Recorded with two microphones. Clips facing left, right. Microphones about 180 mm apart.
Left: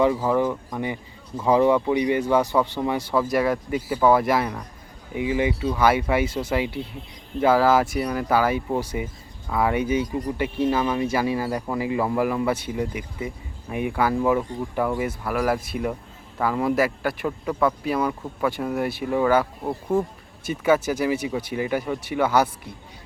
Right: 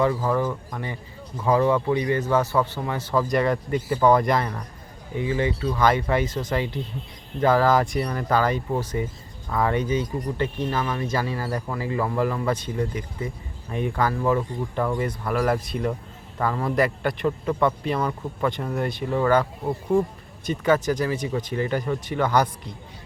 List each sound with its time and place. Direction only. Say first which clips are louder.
0.0 s speech: left 2 dB; 15° left (ahead or behind)